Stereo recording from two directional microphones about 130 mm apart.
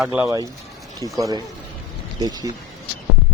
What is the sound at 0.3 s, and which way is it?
Speech, 25° right (ahead or behind).